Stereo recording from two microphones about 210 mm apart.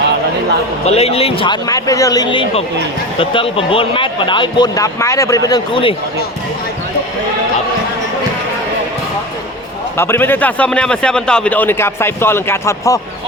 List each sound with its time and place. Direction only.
0.9 s speech: 30° left (ahead or behind)
10.0 s a man's voice: 10° left (ahead or behind)